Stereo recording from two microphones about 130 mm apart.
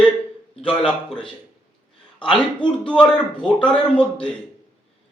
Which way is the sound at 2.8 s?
5° left (ahead or behind).